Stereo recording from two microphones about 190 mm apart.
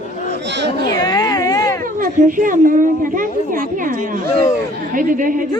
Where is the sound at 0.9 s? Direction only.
20° left (ahead or behind).